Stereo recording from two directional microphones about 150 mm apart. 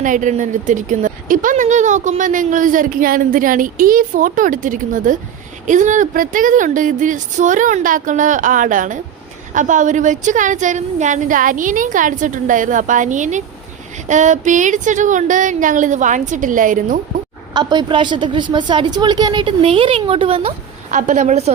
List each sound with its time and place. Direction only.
0.0 s speech: 60° right (ahead or behind)
17.5 s a woman's voice: 30° right (ahead or behind)
20.9 s a woman's voice: 55° right (ahead or behind)